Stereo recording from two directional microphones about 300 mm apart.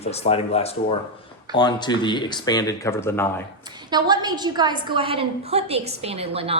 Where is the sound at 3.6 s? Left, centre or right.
Centre.